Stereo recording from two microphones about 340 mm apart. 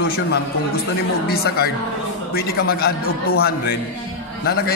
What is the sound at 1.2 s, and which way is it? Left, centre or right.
A man's voice, left.